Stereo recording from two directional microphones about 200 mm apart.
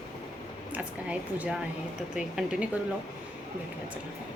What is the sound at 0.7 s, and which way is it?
A woman's voice, 5° right (ahead or behind).